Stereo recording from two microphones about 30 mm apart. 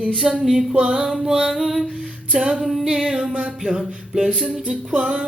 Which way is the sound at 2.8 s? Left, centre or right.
Right.